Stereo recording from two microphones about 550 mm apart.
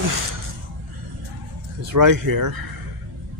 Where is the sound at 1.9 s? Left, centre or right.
Right.